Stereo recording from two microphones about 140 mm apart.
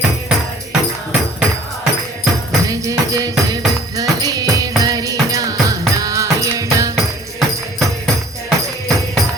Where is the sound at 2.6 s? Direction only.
20° right (ahead or behind).